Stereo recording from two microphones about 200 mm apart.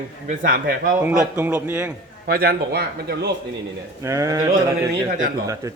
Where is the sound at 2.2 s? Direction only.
50° right (ahead or behind).